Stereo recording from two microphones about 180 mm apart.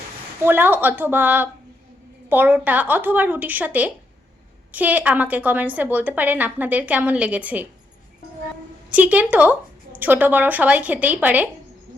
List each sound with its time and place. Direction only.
0.4 s a woman's voice: 10° right (ahead or behind)
8.9 s a woman's voice: 5° right (ahead or behind)